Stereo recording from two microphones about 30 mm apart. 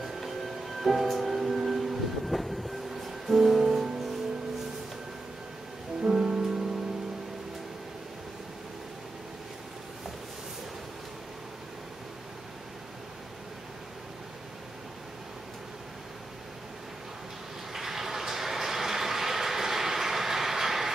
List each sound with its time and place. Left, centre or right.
0.8 s music: centre
6.0 s music: right
17.7 s train: centre